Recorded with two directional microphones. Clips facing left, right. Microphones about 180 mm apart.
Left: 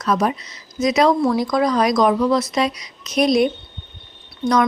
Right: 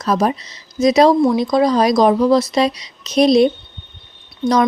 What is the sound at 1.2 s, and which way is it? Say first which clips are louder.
A woman's voice: right 4 dB; 20° right (ahead or behind).